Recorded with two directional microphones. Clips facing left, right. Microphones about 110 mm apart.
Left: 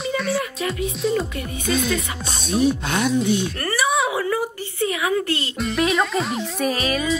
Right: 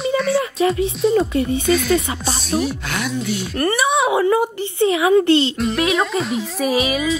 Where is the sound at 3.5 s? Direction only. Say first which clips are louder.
Right 4 dB; 25° right (ahead or behind).